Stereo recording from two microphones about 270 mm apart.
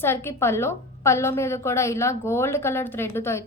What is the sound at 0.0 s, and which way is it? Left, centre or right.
A woman's voice, centre.